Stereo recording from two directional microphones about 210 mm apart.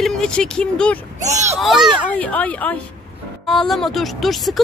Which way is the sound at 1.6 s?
Centre (ahead or behind).